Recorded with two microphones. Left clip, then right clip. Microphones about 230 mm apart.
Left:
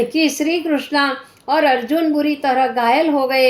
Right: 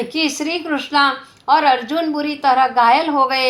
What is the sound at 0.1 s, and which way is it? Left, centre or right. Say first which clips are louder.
A woman's voice: left 2 dB; right.